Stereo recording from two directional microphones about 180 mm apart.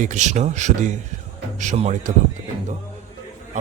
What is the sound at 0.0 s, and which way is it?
Speech, 40° right (ahead or behind).